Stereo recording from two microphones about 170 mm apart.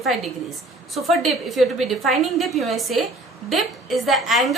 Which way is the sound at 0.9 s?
Centre (ahead or behind).